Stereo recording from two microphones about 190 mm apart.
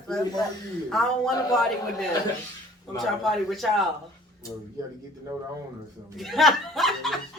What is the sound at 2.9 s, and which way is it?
Speech, centre (ahead or behind).